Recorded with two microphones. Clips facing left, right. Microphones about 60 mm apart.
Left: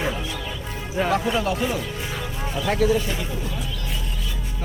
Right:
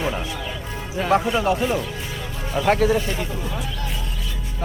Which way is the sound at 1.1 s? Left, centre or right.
Right.